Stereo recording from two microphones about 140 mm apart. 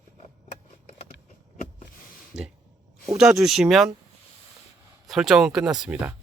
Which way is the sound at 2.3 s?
55° right (ahead or behind).